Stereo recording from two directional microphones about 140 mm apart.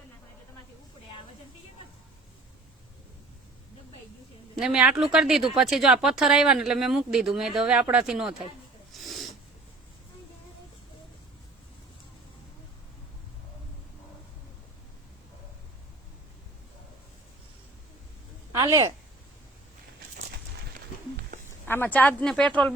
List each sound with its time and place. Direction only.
4.5 s speech: 5° right (ahead or behind)
8.9 s snort: centre (ahead or behind)
18.5 s a woman's voice: 20° right (ahead or behind)
21.7 s speech: 15° left (ahead or behind)